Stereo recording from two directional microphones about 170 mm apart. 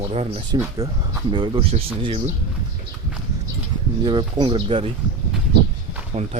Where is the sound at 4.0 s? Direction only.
25° right (ahead or behind).